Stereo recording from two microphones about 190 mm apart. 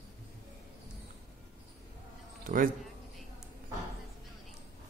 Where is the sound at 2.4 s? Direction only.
45° right (ahead or behind).